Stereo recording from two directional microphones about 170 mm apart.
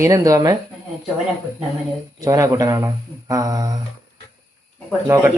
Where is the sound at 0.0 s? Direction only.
20° right (ahead or behind).